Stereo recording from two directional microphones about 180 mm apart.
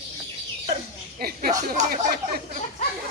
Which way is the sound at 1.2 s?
55° right (ahead or behind).